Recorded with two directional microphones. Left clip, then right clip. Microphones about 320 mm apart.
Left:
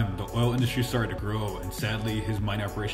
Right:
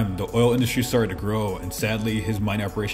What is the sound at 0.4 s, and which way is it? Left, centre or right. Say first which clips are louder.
A man's voice: right 8 dB; centre.